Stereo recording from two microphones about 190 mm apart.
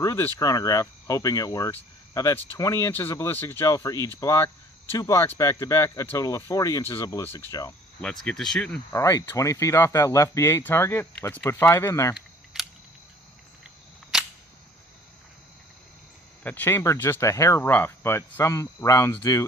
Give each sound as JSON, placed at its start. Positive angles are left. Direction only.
{"t": 0.0, "sound": "speech", "side_deg": 15}
{"t": 8.0, "sound": "speech", "side_deg": 5}
{"t": 8.9, "sound": "speech", "side_deg": 15}
{"t": 16.4, "sound": "speech", "side_deg": 10}